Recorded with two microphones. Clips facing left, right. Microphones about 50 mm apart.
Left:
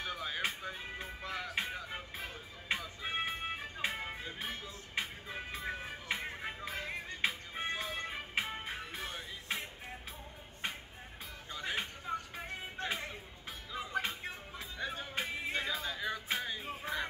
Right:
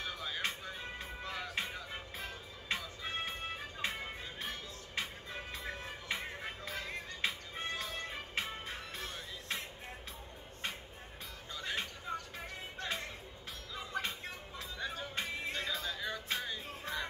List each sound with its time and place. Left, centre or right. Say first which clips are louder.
0.0 s music: left 2 dB; centre
11.5 s music: left 1 dB; centre
12.8 s music: left 2 dB; left
13.7 s music: left 3 dB; centre